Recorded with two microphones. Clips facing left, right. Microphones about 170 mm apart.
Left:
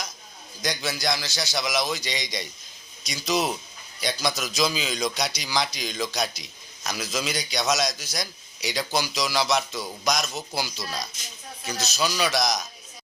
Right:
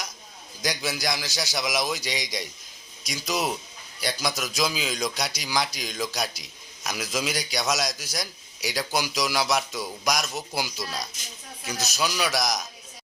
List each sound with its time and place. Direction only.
0.6 s speech: 10° right (ahead or behind)